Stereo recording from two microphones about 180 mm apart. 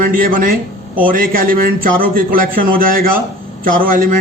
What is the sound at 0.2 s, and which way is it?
A man's voice, 50° right (ahead or behind).